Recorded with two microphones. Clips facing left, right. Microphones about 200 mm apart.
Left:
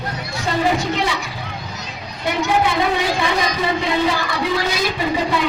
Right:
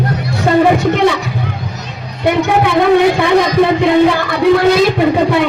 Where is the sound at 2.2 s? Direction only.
60° right (ahead or behind).